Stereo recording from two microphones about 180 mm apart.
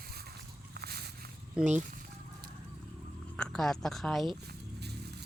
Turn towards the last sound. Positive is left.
turn(degrees=0)  # may be behind; listen again after turning